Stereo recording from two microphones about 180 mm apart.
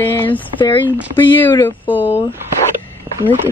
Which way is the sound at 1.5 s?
10° left (ahead or behind).